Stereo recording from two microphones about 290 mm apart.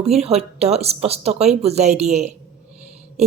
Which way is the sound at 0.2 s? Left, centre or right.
Right.